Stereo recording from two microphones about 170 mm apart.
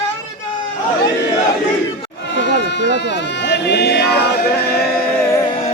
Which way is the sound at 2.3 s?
90° left.